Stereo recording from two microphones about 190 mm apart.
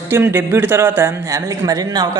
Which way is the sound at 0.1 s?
15° right (ahead or behind).